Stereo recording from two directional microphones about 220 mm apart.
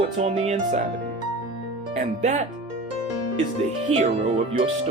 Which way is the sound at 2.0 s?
35° right (ahead or behind).